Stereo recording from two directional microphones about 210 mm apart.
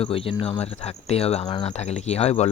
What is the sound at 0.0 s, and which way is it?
Cricket, 25° left (ahead or behind).